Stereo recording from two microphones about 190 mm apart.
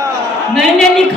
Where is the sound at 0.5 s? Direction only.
Centre (ahead or behind).